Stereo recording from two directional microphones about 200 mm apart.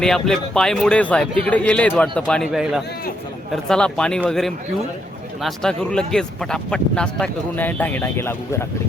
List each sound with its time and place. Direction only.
0.0 s speech: 5° left (ahead or behind)